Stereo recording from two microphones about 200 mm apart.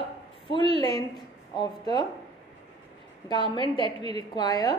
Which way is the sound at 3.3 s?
25° left (ahead or behind).